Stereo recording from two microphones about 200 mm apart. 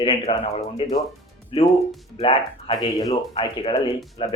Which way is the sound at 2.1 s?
30° left (ahead or behind).